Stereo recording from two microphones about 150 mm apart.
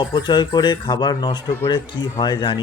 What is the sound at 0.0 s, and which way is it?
Speech, 30° left (ahead or behind).